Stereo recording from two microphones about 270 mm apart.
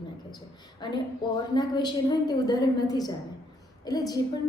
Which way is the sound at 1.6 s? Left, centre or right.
Centre.